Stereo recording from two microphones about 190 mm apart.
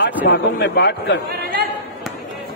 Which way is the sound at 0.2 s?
65° left (ahead or behind).